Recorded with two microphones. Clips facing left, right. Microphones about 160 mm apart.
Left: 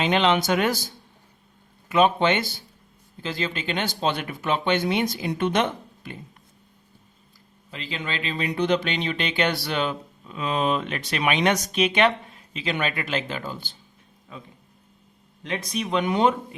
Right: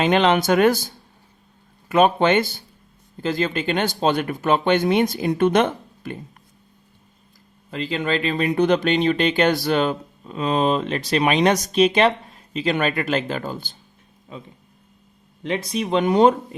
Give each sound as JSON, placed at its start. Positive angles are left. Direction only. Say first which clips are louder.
{"t": 0.0, "sound": "speech", "louder": "right 4 dB", "side_deg": -50}
{"t": 7.7, "sound": "speech", "louder": "right 9 dB", "side_deg": -50}
{"t": 15.4, "sound": "speech", "louder": "right 5 dB", "side_deg": -25}